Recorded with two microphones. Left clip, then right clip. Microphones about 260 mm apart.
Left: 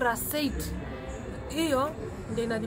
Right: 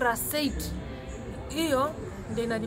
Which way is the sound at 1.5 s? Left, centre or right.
Centre.